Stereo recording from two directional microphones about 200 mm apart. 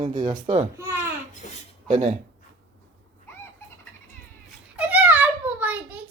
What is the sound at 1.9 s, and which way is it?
Speech, 35° right (ahead or behind).